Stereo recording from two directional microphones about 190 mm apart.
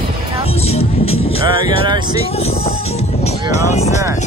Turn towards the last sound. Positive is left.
turn(degrees=35)  # may be behind; listen again after turning